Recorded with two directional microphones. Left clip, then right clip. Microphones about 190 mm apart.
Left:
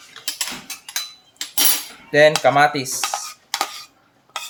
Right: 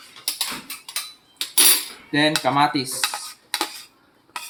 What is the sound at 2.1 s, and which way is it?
Speech, 55° left (ahead or behind).